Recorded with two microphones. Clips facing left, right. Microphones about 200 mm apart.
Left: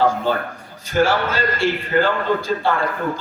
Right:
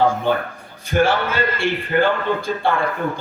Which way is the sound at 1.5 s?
55° right (ahead or behind).